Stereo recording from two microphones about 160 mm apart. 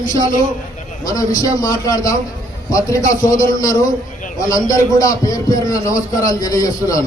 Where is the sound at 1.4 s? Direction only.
20° left (ahead or behind).